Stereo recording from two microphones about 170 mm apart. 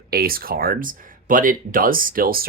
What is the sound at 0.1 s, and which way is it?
Speech, 60° right (ahead or behind).